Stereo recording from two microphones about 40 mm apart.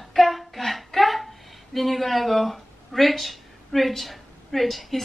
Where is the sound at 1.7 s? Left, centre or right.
Centre.